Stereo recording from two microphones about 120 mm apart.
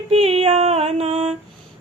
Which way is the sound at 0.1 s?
60° right (ahead or behind).